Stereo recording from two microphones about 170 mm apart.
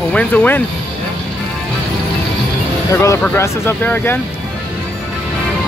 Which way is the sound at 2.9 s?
20° left (ahead or behind).